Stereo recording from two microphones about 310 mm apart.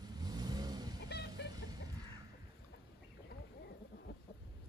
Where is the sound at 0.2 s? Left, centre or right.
Centre.